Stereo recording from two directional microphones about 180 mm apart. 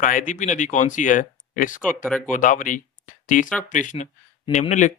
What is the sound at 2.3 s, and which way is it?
Speech, 45° left (ahead or behind).